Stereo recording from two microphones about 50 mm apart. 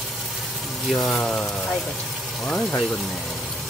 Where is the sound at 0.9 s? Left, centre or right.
Centre.